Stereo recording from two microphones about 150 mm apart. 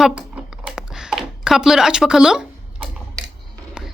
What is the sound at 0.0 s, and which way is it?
Computer keyboard, 5° right (ahead or behind).